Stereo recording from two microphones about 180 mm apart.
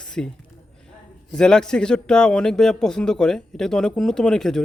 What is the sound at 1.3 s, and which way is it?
A man's voice, 5° left (ahead or behind).